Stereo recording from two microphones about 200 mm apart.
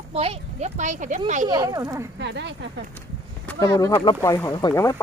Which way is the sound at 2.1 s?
60° right (ahead or behind).